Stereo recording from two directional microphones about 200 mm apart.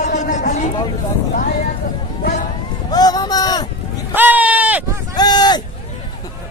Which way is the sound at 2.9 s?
20° left (ahead or behind).